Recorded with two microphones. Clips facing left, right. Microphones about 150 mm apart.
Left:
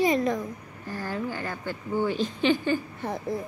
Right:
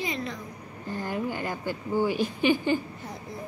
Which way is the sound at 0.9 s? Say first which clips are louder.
Right 1 dB; 20° right (ahead or behind).